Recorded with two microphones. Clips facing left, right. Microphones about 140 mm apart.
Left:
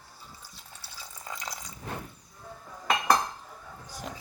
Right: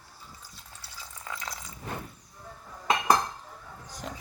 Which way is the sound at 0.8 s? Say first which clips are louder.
Even; 35° left (ahead or behind).